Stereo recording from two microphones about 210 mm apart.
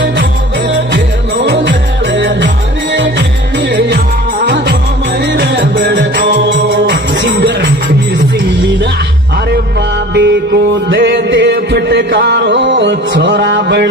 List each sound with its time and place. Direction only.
0.0 s music: 60° right (ahead or behind)
5.2 s music: 55° right (ahead or behind)
10.1 s music: 55° right (ahead or behind)